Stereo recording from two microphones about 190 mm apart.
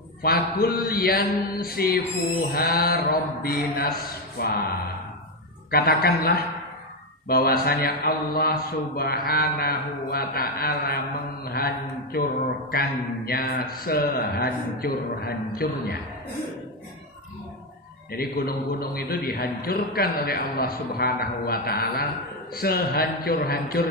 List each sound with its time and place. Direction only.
0.2 s a man's voice: 55° left (ahead or behind)
5.7 s a man's voice: 55° left (ahead or behind)
11.5 s mantra: 55° left (ahead or behind)
12.7 s a man's voice: 55° left (ahead or behind)
18.2 s a man's voice: 55° left (ahead or behind)